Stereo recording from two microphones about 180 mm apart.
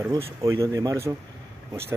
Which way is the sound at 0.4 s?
15° right (ahead or behind).